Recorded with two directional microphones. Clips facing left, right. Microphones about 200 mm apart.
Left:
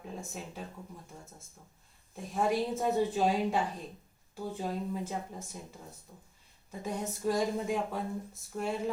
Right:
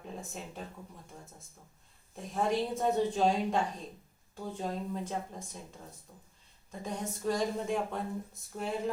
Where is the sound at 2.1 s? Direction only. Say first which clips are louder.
Left 1 dB; 5° left (ahead or behind).